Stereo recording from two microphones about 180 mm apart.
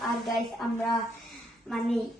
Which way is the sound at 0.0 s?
Centre (ahead or behind).